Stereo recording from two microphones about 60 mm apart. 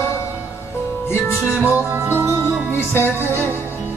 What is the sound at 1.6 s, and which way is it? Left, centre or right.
Music, right.